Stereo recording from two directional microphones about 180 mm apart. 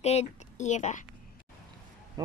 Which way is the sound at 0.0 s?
35° left (ahead or behind).